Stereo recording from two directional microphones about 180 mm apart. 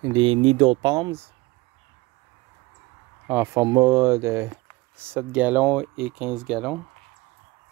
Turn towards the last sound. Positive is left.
turn(degrees=0)  # may be behind; listen again after turning